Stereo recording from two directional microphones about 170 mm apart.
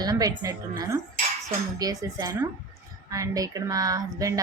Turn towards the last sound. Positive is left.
turn(degrees=-20)  # may be behind; listen again after turning